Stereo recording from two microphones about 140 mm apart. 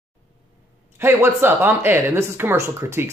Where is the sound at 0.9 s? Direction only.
15° right (ahead or behind).